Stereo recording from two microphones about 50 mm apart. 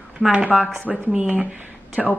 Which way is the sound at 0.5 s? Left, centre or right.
Centre.